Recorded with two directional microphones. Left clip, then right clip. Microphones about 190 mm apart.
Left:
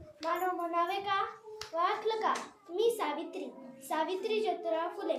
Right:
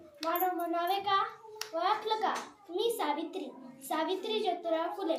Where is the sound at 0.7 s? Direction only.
15° left (ahead or behind).